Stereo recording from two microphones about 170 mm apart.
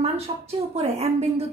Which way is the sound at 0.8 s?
40° right (ahead or behind).